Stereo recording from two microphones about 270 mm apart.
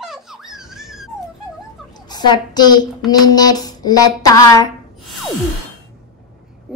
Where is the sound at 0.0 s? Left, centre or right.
Centre.